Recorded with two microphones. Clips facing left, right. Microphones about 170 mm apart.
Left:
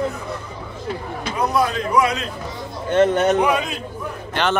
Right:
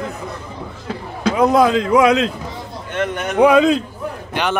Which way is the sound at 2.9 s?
30° left (ahead or behind).